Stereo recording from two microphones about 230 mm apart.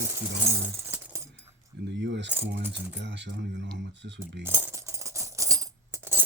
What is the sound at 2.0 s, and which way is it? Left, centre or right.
Speech, right.